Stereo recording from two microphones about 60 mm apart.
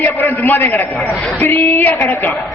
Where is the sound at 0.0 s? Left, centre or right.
Left.